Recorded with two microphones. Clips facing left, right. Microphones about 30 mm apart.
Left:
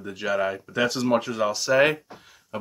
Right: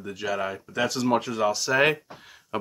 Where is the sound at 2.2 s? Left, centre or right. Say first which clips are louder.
Right 3 dB; centre.